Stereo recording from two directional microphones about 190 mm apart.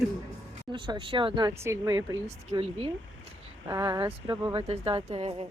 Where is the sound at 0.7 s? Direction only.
25° right (ahead or behind).